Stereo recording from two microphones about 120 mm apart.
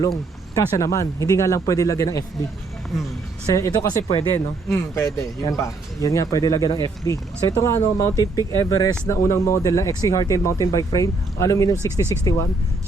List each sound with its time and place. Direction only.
0.5 s speech: 25° left (ahead or behind)
2.9 s speech: 5° right (ahead or behind)
3.4 s speech: 30° left (ahead or behind)